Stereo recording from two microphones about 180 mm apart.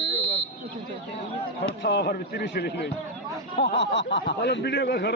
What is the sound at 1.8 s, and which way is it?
Speech, 70° left (ahead or behind).